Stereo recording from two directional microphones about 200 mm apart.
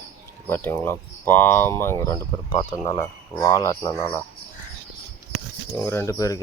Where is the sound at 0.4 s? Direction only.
10° left (ahead or behind).